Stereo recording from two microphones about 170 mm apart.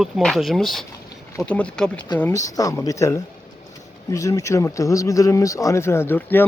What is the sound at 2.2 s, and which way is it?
Speech, 15° left (ahead or behind).